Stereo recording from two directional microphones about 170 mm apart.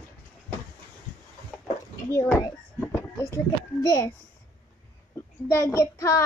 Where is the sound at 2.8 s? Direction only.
15° left (ahead or behind).